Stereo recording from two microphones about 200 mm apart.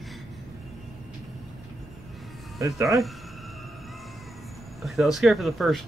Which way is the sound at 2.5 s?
15° right (ahead or behind).